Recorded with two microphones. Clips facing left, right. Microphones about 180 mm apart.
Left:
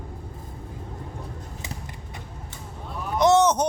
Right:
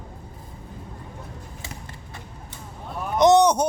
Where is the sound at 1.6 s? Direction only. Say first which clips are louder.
Left 2 dB; 15° left (ahead or behind).